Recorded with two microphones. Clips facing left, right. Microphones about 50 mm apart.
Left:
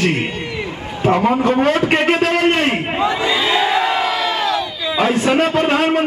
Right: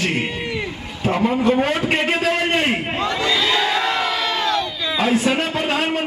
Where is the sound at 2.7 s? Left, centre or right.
Centre.